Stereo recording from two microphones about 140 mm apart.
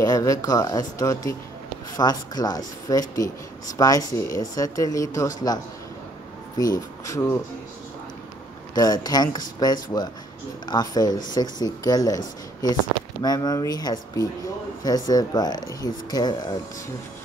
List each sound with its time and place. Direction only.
0.0 s speech: 25° left (ahead or behind)
6.6 s speech: 25° left (ahead or behind)
8.7 s speech: 25° left (ahead or behind)
13.2 s speech: 30° left (ahead or behind)